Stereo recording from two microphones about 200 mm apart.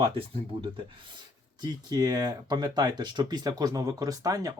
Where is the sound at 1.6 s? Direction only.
20° right (ahead or behind).